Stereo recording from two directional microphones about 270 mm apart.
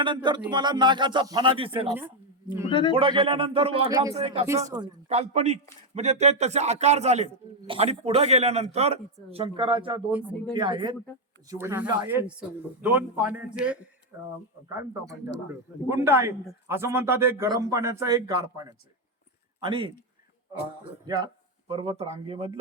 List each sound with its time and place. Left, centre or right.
0.0 s a man's voice: centre
2.0 s a woman's voice: centre
2.6 s a man's voice: centre
2.9 s a man's voice: centre
4.4 s a man's voice: centre
10.1 s speech: centre
10.5 s a man's voice: centre
15.9 s a man's voice: centre
21.1 s a man's voice: centre